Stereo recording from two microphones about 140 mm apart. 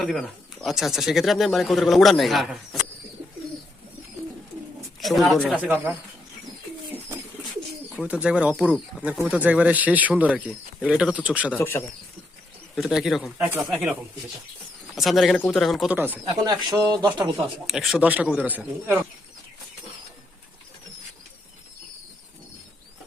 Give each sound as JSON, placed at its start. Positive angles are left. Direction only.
{"t": 0.0, "sound": "speech", "side_deg": 0}
{"t": 4.9, "sound": "speech", "side_deg": 0}
{"t": 8.0, "sound": "speech", "side_deg": -10}
{"t": 11.5, "sound": "speech", "side_deg": 15}
{"t": 12.7, "sound": "speech", "side_deg": 0}
{"t": 14.9, "sound": "speech", "side_deg": 0}
{"t": 15.9, "sound": "speech", "side_deg": -15}
{"t": 16.2, "sound": "speech", "side_deg": -30}
{"t": 17.7, "sound": "speech", "side_deg": 0}